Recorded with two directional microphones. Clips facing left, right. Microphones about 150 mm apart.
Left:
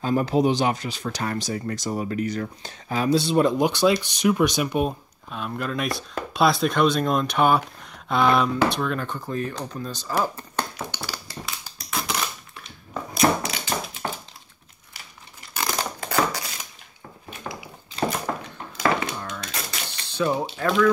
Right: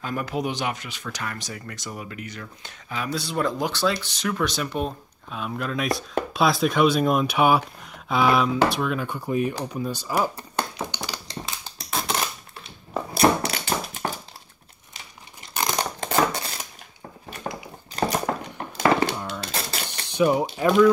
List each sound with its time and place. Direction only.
0.0 s speech: 30° left (ahead or behind); by 4.9 s 15° left (ahead or behind)
5.3 s speech: centre (ahead or behind)
11.6 s a sound: 25° right (ahead or behind)
15.5 s crushing: 15° right (ahead or behind)
18.8 s a sound: 35° right (ahead or behind)
19.1 s a sound: 15° right (ahead or behind)
19.4 s typewriter: 30° right (ahead or behind)
19.9 s typewriter: 15° right (ahead or behind)
20.5 s speech: 15° right (ahead or behind)